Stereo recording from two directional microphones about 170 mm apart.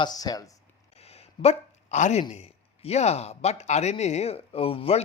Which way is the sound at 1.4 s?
40° left (ahead or behind).